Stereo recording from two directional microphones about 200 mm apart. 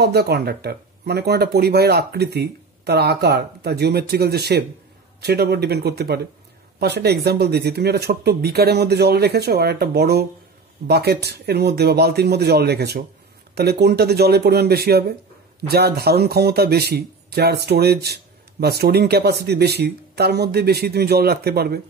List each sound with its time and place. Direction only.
0.0 s speech: 55° right (ahead or behind)